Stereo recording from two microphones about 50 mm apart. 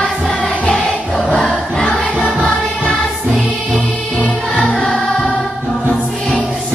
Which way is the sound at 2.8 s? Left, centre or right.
Centre.